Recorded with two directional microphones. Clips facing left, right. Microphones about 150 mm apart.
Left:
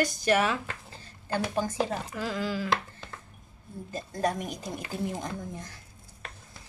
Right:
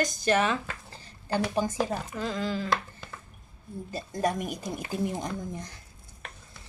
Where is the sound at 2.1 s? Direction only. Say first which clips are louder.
Right 1 dB; 10° left (ahead or behind).